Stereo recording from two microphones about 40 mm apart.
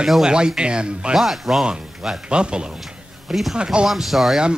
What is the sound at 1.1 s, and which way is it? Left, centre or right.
Speech, centre.